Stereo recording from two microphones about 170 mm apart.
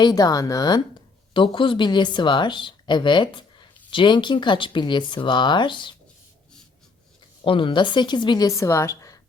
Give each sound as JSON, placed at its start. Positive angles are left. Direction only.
{"t": 0.0, "sound": "a woman's voice", "side_deg": 20}
{"t": 7.4, "sound": "a woman's voice", "side_deg": 30}